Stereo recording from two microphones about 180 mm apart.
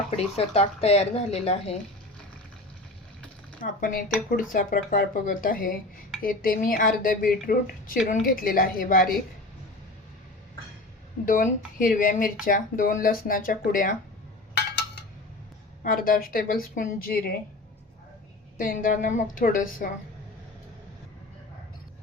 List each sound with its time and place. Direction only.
0.3 s a woman's voice: 35° left (ahead or behind)
3.6 s a woman's voice: 50° left (ahead or behind)
11.3 s a woman's voice: 50° left (ahead or behind)
15.8 s a woman's voice: 55° left (ahead or behind)
18.5 s a woman's voice: 50° left (ahead or behind)